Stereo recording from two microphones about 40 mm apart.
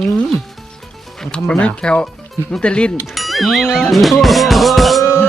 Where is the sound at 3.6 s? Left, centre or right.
Centre.